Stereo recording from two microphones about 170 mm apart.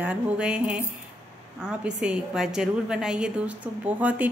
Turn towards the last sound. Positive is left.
turn(degrees=-10)  # may be behind; listen again after turning